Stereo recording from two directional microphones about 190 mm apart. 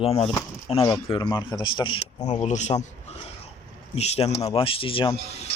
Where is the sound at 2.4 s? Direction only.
40° left (ahead or behind).